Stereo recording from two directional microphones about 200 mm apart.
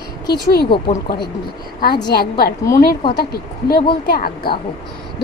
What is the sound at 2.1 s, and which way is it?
A woman's voice, 50° left (ahead or behind).